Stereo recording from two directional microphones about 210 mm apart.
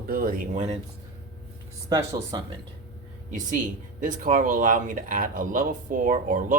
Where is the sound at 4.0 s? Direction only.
40° right (ahead or behind).